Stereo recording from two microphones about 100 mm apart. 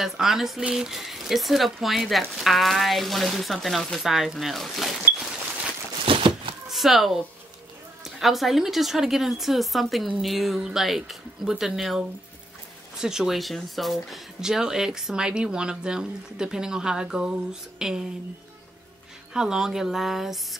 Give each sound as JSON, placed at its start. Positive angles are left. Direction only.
{"t": 0.0, "sound": "speech", "side_deg": -5}
{"t": 6.0, "sound": "a sound", "side_deg": -60}
{"t": 6.7, "sound": "speech", "side_deg": 0}
{"t": 13.0, "sound": "speech", "side_deg": -5}
{"t": 19.3, "sound": "speech", "side_deg": -5}